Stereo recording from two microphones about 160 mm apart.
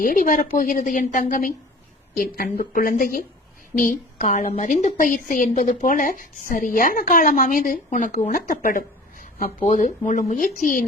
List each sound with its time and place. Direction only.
0.0 s speech: 60° left (ahead or behind)
9.6 s speech: 50° left (ahead or behind)